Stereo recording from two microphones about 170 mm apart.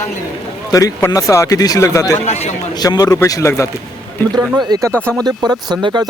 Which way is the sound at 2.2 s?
40° left (ahead or behind).